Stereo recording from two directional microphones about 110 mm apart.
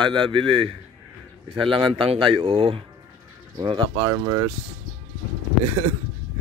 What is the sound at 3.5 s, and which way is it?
Speech, 45° right (ahead or behind).